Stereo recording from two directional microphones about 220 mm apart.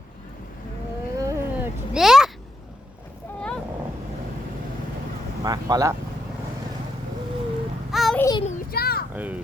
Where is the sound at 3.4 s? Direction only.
5° left (ahead or behind).